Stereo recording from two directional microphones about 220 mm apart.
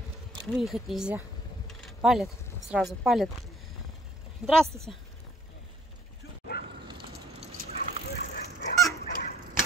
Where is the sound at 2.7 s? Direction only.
Centre (ahead or behind).